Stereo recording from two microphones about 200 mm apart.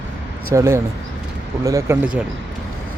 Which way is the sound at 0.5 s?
15° right (ahead or behind).